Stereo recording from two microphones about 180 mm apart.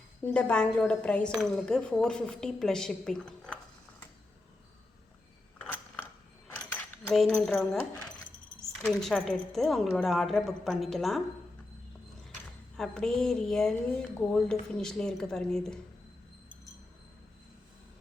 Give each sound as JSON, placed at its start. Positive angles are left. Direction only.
{"t": 0.2, "sound": "a woman's voice", "side_deg": 5}
{"t": 5.5, "sound": "a sound", "side_deg": 10}
{"t": 7.1, "sound": "a woman's voice", "side_deg": 0}
{"t": 8.8, "sound": "a woman's voice", "side_deg": 0}
{"t": 12.7, "sound": "a woman's voice", "side_deg": 5}